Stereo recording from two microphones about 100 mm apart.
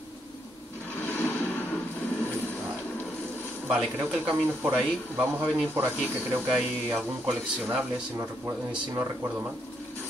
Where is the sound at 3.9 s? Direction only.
20° right (ahead or behind).